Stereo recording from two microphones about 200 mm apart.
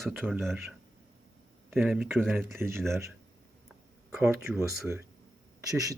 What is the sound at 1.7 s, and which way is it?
Speech, centre (ahead or behind).